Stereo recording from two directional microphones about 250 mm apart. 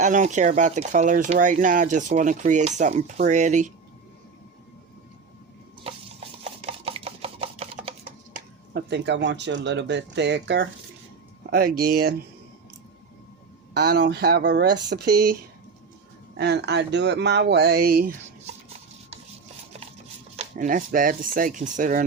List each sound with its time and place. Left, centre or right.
0.0 s speech: right
5.8 s stir: right
8.7 s speech: right
13.7 s speech: right
16.4 s speech: right
20.3 s speech: right